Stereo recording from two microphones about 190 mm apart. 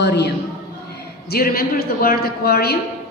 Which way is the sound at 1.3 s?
50° left (ahead or behind).